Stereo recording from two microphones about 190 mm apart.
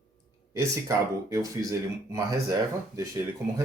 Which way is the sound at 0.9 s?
15° right (ahead or behind).